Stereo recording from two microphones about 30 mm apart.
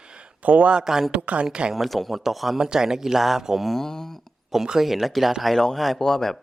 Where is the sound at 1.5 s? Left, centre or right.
Right.